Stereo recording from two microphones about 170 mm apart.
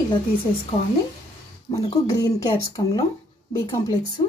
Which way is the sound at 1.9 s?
20° left (ahead or behind).